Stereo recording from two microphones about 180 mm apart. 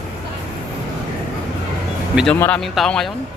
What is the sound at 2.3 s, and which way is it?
Speech, 10° left (ahead or behind).